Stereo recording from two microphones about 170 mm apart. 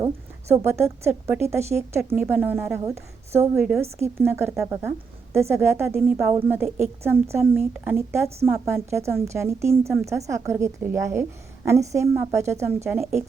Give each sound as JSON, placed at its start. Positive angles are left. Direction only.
{"t": 0.6, "sound": "a woman's voice", "side_deg": -15}